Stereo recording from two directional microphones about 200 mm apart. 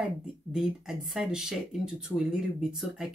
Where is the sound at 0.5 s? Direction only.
5° right (ahead or behind).